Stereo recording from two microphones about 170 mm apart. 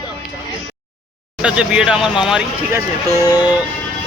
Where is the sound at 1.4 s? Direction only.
5° right (ahead or behind).